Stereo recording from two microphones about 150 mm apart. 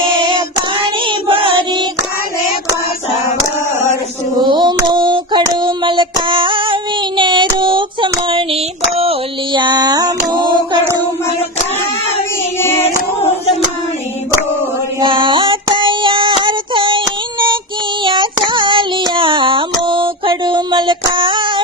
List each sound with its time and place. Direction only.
0.2 s child singing: 30° right (ahead or behind)
1.0 s chant: 35° right (ahead or behind)
4.4 s female singing: 30° right (ahead or behind)
7.2 s child singing: 30° right (ahead or behind)
9.0 s a sound: 35° right (ahead or behind)
12.5 s child singing: 15° left (ahead or behind)
15.0 s female singing: 35° right (ahead or behind)
18.0 s female singing: 30° right (ahead or behind)
19.8 s a sound: 35° right (ahead or behind)